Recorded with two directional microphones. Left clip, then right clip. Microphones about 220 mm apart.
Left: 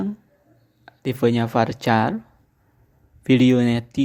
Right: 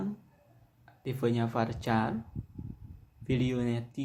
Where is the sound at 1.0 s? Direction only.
35° left (ahead or behind).